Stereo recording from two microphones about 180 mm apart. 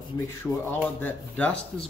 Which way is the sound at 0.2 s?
15° left (ahead or behind).